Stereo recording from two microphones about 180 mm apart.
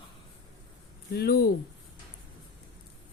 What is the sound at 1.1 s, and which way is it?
Speech, 60° left (ahead or behind).